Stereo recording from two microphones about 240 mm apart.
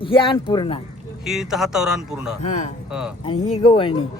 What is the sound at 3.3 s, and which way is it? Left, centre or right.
Speech, left.